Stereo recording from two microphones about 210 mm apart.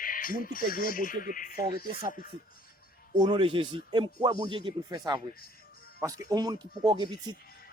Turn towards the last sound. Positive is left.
turn(degrees=-20)  # may be behind; listen again after turning